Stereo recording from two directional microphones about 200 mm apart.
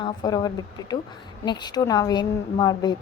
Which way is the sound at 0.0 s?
20° left (ahead or behind).